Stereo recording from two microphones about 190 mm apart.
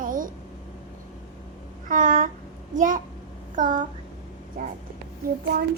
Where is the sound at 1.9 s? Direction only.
45° right (ahead or behind).